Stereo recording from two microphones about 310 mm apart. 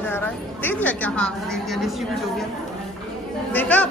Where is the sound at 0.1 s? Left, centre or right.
Centre.